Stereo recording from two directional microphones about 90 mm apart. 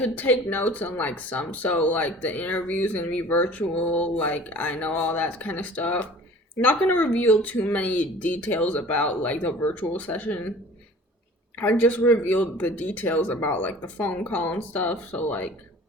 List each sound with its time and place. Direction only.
0.0 s speech: 20° left (ahead or behind)
11.5 s speech: 20° left (ahead or behind)